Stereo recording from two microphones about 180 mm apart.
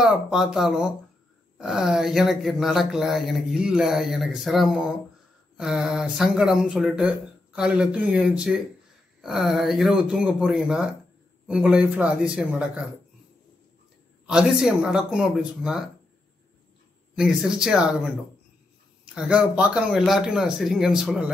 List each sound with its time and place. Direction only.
0.0 s speech: centre (ahead or behind)
14.2 s speech: 5° right (ahead or behind)
17.1 s speech: 5° right (ahead or behind)
19.1 s speech: 5° right (ahead or behind)